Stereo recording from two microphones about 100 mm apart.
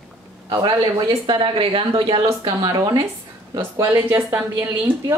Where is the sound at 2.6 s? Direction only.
40° right (ahead or behind).